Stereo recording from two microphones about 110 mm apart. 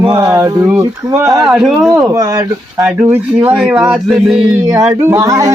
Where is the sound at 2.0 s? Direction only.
30° right (ahead or behind).